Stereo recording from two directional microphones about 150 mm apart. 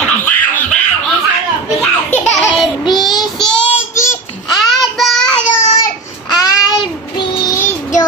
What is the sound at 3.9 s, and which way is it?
Babbling, 20° left (ahead or behind).